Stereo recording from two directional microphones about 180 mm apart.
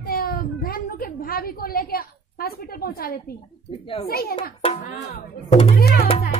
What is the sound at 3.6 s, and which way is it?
Speech, 30° left (ahead or behind).